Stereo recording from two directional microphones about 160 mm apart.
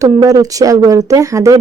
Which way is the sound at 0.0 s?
20° right (ahead or behind).